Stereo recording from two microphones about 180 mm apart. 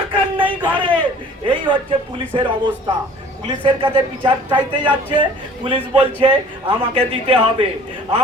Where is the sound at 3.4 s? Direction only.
25° right (ahead or behind).